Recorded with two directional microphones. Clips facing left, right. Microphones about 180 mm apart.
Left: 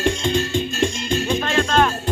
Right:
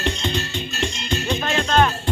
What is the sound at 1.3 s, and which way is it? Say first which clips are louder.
Music: even; centre (ahead or behind).